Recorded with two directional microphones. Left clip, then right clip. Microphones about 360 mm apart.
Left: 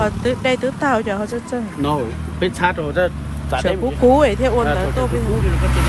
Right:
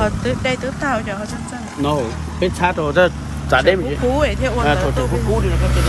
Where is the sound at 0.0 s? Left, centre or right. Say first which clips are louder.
Left 1 dB; centre.